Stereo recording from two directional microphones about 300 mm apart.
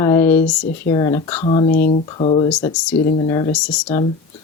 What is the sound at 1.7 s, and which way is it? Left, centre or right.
Speech, left.